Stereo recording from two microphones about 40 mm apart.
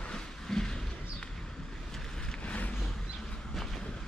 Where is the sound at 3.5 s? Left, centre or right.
Centre.